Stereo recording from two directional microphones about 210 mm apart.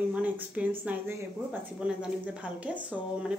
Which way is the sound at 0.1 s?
5° right (ahead or behind).